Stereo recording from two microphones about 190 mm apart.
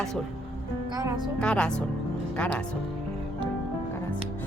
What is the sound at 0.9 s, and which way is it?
Speech, 20° right (ahead or behind).